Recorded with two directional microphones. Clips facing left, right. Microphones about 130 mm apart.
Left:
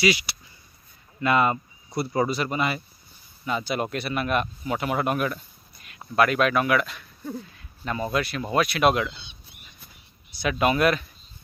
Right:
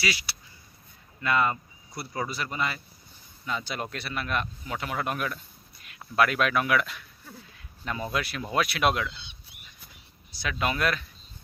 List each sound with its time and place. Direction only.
0.0 s a man's voice: 15° left (ahead or behind); by 9.0 s centre (ahead or behind)
10.6 s speech: 15° left (ahead or behind)